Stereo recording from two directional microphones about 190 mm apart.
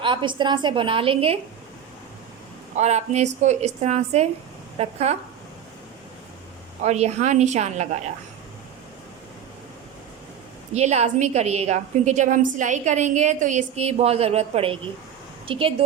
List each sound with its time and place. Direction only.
0.0 s a woman's voice: 25° right (ahead or behind)
2.7 s a woman's voice: 35° right (ahead or behind)
6.8 s a woman's voice: 35° right (ahead or behind)
10.8 s a woman's voice: 35° right (ahead or behind)